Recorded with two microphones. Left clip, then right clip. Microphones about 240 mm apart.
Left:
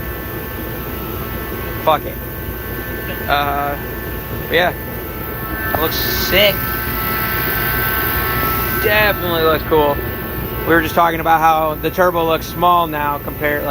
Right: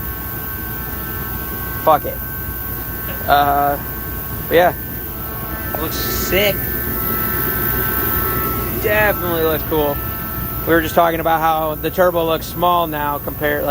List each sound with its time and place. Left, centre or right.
1.9 s speech: right
3.2 s speech: right
5.8 s speech: centre
7.2 s vehicle: centre
8.9 s speech: centre